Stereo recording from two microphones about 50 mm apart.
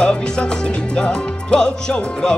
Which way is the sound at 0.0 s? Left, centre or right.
Centre.